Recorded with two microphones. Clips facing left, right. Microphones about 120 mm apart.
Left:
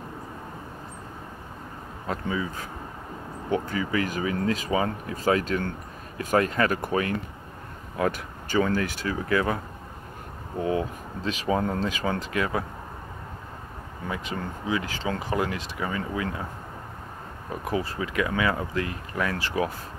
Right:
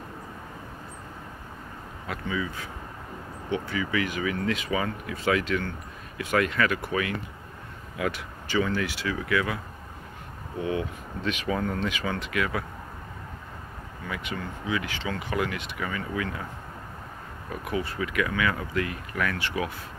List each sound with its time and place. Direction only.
2.0 s speech: 35° left (ahead or behind)
10.6 s speech: 35° left (ahead or behind)
14.0 s speech: 30° left (ahead or behind)
17.5 s speech: 30° left (ahead or behind)